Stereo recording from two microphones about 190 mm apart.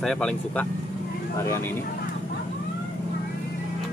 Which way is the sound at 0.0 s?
5° left (ahead or behind).